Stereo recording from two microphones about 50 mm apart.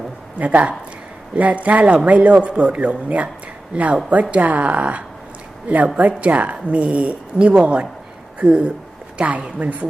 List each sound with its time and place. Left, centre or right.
0.3 s a woman's voice: right
4.1 s a woman's voice: right